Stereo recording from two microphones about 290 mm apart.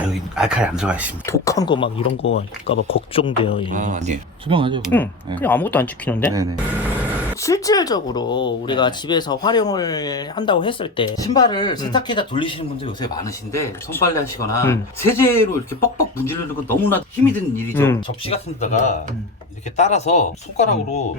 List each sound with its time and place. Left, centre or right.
0.1 s speech: centre
1.3 s speech: centre
3.7 s speech: right
4.9 s speech: centre
6.3 s speech: centre
7.4 s speech: centre
18.3 s speech: left